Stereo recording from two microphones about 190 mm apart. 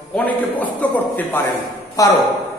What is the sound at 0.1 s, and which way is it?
A man's voice, 10° left (ahead or behind).